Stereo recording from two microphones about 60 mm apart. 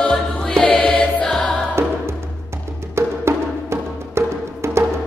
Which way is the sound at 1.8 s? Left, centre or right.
Right.